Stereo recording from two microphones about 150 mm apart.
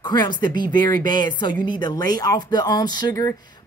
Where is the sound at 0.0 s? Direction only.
30° left (ahead or behind).